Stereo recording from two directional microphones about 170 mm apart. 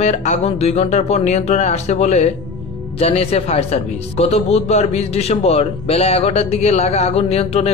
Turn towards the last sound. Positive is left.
turn(degrees=35)  # may be behind; listen again after turning